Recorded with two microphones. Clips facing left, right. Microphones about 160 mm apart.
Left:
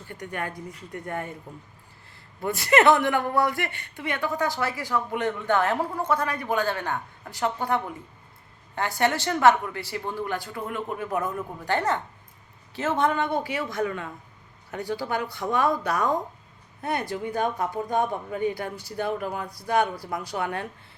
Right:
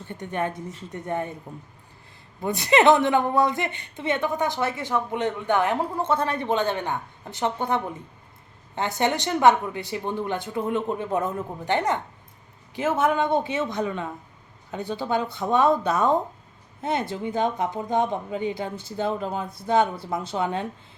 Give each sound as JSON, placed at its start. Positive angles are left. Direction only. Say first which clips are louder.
{"t": 0.1, "sound": "speech", "louder": "right 5 dB", "side_deg": -20}
{"t": 2.4, "sound": "speech", "louder": "right 1 dB", "side_deg": -20}